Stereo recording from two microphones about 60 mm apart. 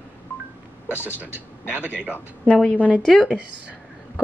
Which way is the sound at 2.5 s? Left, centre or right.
Centre.